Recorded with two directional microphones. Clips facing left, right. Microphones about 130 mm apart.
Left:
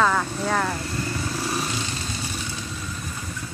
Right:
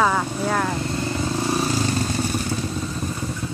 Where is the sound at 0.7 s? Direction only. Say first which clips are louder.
Right 4 dB; 25° right (ahead or behind); by 3.1 s 45° right (ahead or behind).